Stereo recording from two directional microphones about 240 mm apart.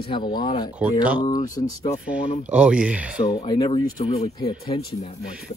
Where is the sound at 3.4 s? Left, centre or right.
Left.